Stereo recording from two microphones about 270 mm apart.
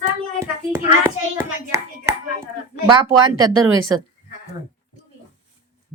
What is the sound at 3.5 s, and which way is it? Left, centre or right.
Speech, right.